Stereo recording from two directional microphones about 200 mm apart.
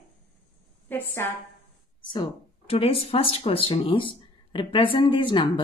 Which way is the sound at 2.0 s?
25° left (ahead or behind).